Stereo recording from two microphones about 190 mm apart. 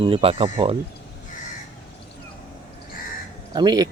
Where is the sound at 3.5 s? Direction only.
20° right (ahead or behind).